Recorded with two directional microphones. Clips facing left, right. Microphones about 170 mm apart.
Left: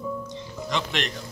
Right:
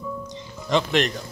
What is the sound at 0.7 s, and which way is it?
Speech, 40° right (ahead or behind).